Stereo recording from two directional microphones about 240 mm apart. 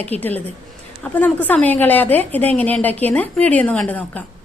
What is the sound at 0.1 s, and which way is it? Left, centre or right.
A woman's voice, centre.